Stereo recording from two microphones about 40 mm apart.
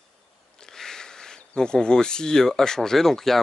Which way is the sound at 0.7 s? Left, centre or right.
Centre.